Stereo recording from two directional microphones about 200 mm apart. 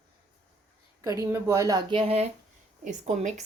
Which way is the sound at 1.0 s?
15° right (ahead or behind).